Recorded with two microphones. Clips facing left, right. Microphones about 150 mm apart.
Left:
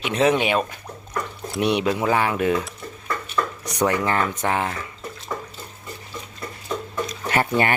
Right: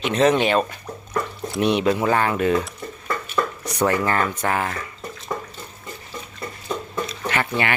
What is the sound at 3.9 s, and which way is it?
Speech, 15° left (ahead or behind).